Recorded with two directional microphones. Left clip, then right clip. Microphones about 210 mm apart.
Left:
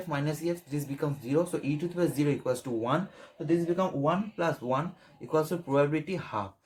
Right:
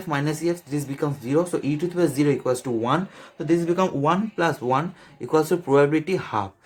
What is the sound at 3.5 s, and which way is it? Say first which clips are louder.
Speech: right 7 dB; 35° right (ahead or behind).